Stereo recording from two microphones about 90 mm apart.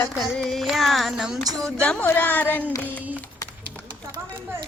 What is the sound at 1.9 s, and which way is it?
Speech, 10° left (ahead or behind).